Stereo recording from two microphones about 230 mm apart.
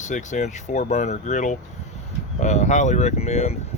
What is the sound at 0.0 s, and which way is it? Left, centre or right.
Speech, left.